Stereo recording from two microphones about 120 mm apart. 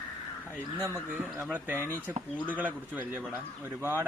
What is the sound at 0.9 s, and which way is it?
A man's voice, 20° right (ahead or behind).